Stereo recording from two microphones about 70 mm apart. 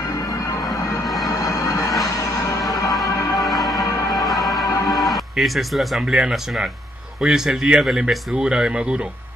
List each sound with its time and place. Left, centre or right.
1.2 s music: left
3.4 s music: centre
3.7 s music: left
4.8 s speech: centre